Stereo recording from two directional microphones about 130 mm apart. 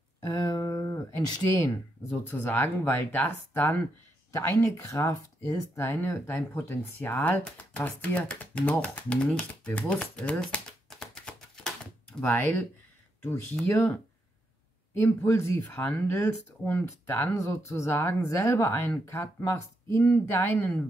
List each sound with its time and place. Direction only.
0.3 s speech: 25° left (ahead or behind)
2.0 s speech: 15° left (ahead or behind)
10.4 s a sound: 5° left (ahead or behind)
13.2 s speech: 15° left (ahead or behind)